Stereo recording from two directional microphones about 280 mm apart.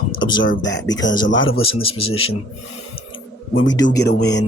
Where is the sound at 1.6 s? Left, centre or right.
Centre.